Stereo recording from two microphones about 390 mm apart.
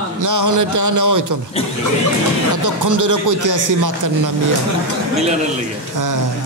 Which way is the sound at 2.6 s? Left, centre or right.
Right.